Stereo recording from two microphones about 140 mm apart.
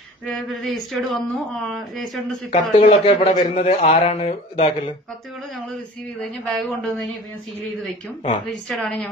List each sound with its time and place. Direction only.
0.7 s speech: centre (ahead or behind)
2.5 s a man's voice: 40° left (ahead or behind)
6.2 s speech: centre (ahead or behind)
8.6 s speech: 5° left (ahead or behind)